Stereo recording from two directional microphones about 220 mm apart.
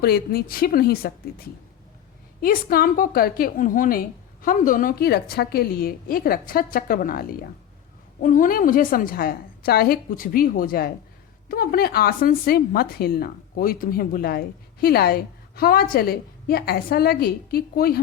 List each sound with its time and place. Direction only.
0.0 s speech: 45° left (ahead or behind)
2.4 s a woman's voice: 40° left (ahead or behind)